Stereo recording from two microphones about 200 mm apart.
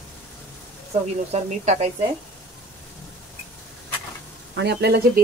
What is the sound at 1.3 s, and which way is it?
Speech, 30° right (ahead or behind).